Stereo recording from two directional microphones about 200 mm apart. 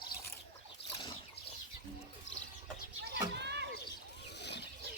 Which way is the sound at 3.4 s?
60° right (ahead or behind).